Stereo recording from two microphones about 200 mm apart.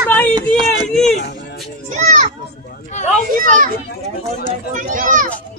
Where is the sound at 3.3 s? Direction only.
40° right (ahead or behind).